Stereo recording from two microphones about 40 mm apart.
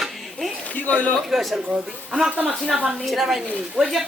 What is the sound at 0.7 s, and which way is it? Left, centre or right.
Speech, left.